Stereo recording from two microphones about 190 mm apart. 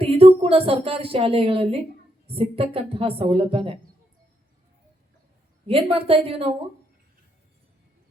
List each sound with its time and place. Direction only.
0.0 s a woman's voice: 30° right (ahead or behind)
5.6 s a woman's voice: 30° right (ahead or behind)